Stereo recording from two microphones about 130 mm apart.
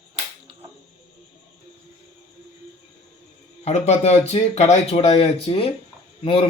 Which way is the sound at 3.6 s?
55° left (ahead or behind).